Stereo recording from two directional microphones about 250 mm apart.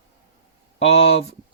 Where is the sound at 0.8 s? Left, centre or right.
Left.